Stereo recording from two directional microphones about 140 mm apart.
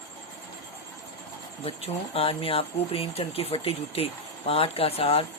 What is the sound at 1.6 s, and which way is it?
Speech, 45° left (ahead or behind).